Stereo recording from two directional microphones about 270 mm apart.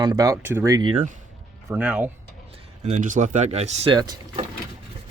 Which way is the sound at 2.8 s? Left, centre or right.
Right.